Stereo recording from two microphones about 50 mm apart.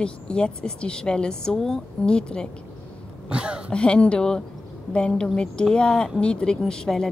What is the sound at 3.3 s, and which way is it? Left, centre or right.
Speech, centre.